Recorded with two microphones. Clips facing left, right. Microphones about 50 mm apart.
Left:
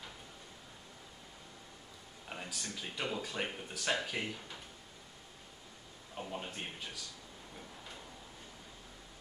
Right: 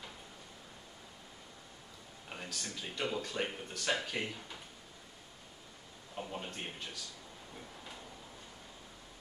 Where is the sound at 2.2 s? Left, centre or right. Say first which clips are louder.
Even; centre.